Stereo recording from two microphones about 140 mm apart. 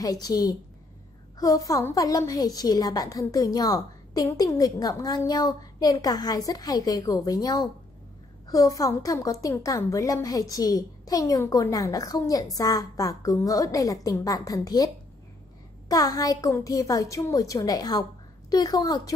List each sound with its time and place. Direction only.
0.0 s a woman's voice: 25° left (ahead or behind)
15.9 s a woman's voice: 25° left (ahead or behind)